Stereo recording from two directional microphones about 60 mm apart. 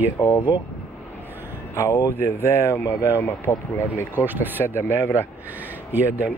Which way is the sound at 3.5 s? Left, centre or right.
Left.